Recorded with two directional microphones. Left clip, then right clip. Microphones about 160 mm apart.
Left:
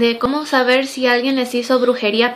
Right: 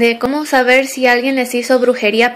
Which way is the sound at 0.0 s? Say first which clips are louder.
Right 3 dB; 15° right (ahead or behind).